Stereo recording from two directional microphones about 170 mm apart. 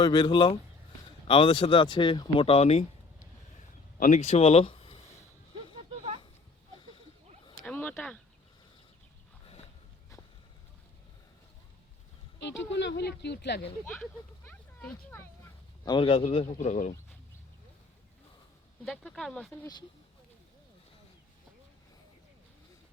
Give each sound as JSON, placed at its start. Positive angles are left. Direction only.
{"t": 0.0, "sound": "speech", "side_deg": 25}
{"t": 4.0, "sound": "speech", "side_deg": 40}
{"t": 7.6, "sound": "a sound", "side_deg": 10}
{"t": 12.4, "sound": "speech", "side_deg": 90}
{"t": 13.8, "sound": "speech", "side_deg": 10}
{"t": 15.8, "sound": "speech", "side_deg": 25}
{"t": 18.9, "sound": "speech", "side_deg": 0}
{"t": 19.5, "sound": "speech", "side_deg": 20}